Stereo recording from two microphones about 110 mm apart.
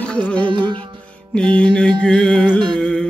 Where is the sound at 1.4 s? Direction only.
10° left (ahead or behind).